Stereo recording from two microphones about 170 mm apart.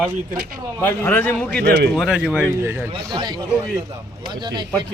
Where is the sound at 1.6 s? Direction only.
75° right (ahead or behind).